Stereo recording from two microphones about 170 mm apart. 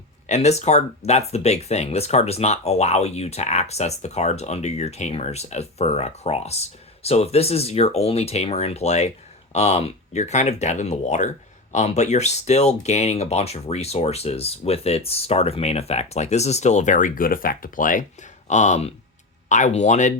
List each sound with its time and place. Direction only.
0.3 s speech: 40° left (ahead or behind)